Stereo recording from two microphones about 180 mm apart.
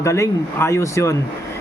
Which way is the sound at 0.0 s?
15° left (ahead or behind).